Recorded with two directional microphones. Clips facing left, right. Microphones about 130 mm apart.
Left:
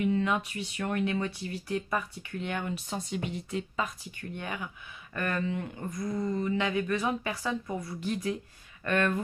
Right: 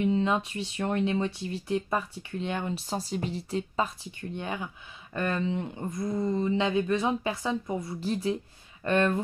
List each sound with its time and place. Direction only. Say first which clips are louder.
0.0 s speech: right 2 dB; 25° right (ahead or behind)